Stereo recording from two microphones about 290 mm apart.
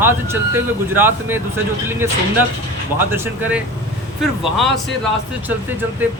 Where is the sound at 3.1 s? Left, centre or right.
Centre.